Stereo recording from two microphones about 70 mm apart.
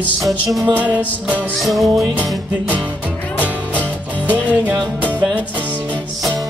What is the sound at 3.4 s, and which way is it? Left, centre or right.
Music, right.